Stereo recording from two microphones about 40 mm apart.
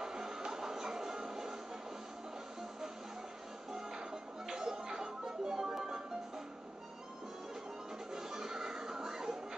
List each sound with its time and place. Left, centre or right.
0.0 s music: centre
3.7 s music: centre
8.1 s music: centre